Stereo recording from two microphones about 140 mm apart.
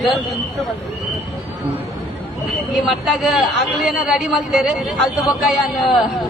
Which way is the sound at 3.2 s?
Centre (ahead or behind).